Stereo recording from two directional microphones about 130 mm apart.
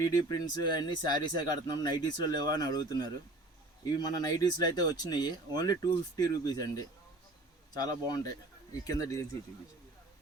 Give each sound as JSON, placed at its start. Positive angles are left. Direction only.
{"t": 0.3, "sound": "speech", "side_deg": 30}